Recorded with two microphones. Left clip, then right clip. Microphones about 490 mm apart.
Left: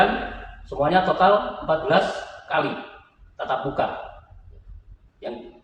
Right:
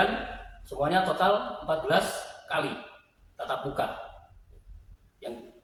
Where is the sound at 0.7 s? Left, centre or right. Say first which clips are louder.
Left 6 dB; right.